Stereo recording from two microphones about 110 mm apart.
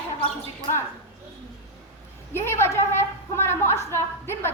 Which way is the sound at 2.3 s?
20° left (ahead or behind).